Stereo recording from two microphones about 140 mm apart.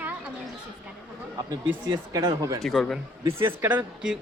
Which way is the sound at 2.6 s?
Centre (ahead or behind).